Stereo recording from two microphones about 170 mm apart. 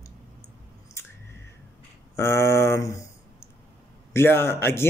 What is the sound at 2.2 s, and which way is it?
Speech, 15° left (ahead or behind).